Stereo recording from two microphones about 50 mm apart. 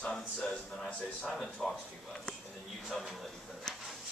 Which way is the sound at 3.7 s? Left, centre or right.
Centre.